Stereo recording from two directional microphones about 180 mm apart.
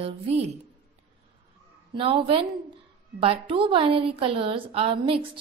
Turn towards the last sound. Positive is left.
turn(degrees=-30)  # may be behind; listen again after turning